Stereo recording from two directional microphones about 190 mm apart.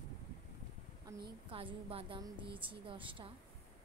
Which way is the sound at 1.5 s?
30° right (ahead or behind).